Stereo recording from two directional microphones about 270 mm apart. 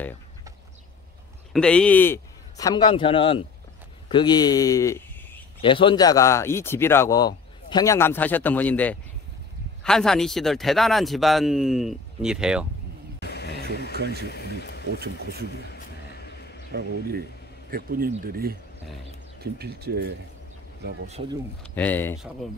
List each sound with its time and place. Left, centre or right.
1.5 s a man's voice: centre
13.2 s a sound: left
13.9 s speech: right
14.2 s a sound: left
14.9 s speech: right
15.7 s a sound: left
16.7 s speech: right
21.1 s speech: right
21.7 s speech: centre